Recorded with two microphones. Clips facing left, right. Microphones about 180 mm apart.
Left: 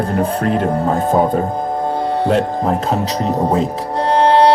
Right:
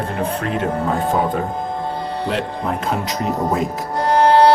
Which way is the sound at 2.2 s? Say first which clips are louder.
Left 6 dB; 40° left (ahead or behind).